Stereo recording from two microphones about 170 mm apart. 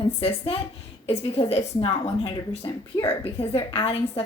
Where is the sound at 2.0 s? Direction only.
25° left (ahead or behind).